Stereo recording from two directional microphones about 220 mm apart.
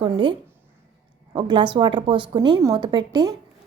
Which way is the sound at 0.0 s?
20° right (ahead or behind).